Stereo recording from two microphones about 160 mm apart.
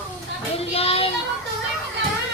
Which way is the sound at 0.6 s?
40° left (ahead or behind).